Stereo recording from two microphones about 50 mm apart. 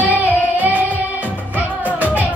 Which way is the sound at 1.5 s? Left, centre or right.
Right.